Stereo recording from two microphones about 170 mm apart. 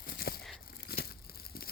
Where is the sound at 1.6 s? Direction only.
60° left (ahead or behind).